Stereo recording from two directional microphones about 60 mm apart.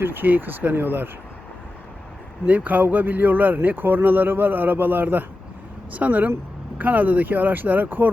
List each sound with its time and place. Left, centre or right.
0.0 s speech: right
2.5 s speech: right